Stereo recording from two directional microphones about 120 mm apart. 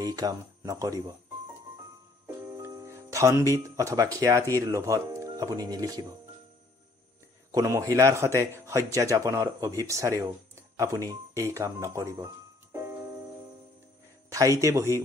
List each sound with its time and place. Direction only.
0.0 s speech: 35° right (ahead or behind)
2.2 s speech: 25° right (ahead or behind)
7.5 s a man's voice: 30° right (ahead or behind)
14.3 s a man's voice: 25° right (ahead or behind)